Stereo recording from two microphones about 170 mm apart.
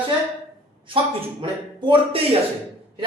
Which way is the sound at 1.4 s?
30° right (ahead or behind).